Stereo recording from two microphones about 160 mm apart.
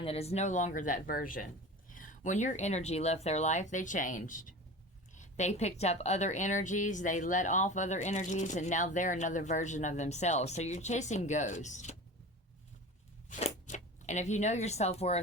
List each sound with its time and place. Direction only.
0.0 s a woman's voice: 40° left (ahead or behind)
13.2 s speech: 50° left (ahead or behind)